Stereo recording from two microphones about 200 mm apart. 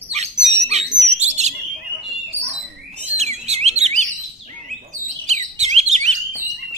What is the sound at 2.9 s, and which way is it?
Bird, 35° right (ahead or behind).